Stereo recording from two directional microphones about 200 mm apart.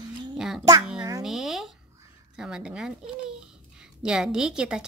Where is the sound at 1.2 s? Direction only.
Centre (ahead or behind).